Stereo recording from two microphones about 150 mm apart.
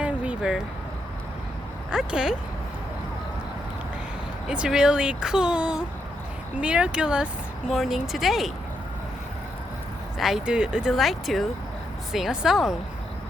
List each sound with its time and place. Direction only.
0.0 s vehicle: 5° right (ahead or behind)
1.9 s speech: 5° right (ahead or behind)
4.4 s speech: 5° right (ahead or behind)
10.2 s speech: centre (ahead or behind)